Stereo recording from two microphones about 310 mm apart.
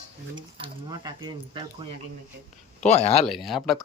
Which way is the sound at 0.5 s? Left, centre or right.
Centre.